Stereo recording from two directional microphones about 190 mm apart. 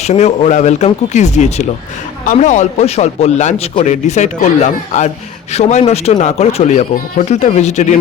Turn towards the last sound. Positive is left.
turn(degrees=35)  # may be behind; listen again after turning